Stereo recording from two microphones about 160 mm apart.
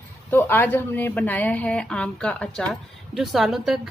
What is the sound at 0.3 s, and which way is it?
A woman's voice, 10° left (ahead or behind).